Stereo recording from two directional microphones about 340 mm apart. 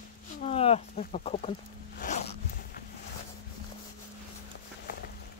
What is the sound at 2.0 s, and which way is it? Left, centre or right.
Zipper, left.